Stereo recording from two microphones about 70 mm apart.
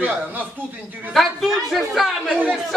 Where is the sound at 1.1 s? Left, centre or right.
Centre.